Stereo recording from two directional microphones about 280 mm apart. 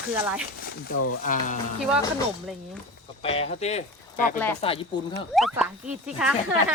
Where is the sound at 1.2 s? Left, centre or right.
Left.